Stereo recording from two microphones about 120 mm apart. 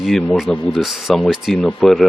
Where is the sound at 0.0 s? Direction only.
5° left (ahead or behind).